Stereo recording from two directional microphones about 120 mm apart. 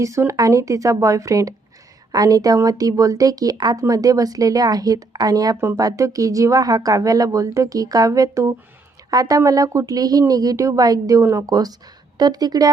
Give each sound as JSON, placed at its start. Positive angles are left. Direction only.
{"t": 0.0, "sound": "speech", "side_deg": -25}